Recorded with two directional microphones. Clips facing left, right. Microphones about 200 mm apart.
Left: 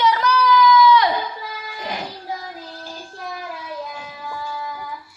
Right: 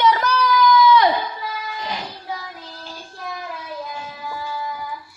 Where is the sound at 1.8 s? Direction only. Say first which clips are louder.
Left 4 dB; 50° left (ahead or behind).